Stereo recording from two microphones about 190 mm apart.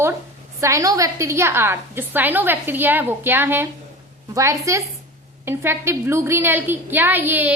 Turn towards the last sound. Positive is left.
turn(degrees=-10)  # may be behind; listen again after turning